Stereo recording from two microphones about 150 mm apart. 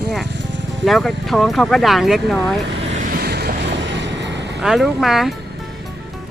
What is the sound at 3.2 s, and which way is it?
Vehicle, 90° right.